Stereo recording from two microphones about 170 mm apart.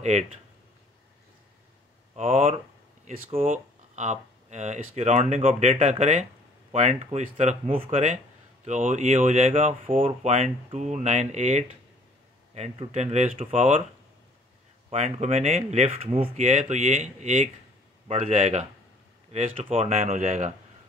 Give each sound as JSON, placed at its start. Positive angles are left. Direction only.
{"t": 0.0, "sound": "speech", "side_deg": -40}
{"t": 2.1, "sound": "speech", "side_deg": -50}
{"t": 3.1, "sound": "speech", "side_deg": -35}
{"t": 3.4, "sound": "speech", "side_deg": -45}
{"t": 8.6, "sound": "speech", "side_deg": -45}
{"t": 14.9, "sound": "speech", "side_deg": -40}